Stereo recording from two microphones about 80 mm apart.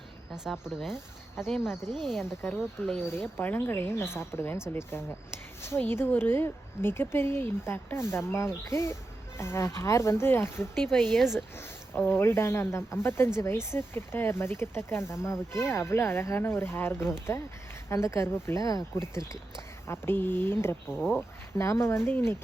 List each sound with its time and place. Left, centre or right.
0.3 s speech: centre
3.0 s speech: left
10.8 s speech: centre
11.9 s speech: left
19.9 s speech: left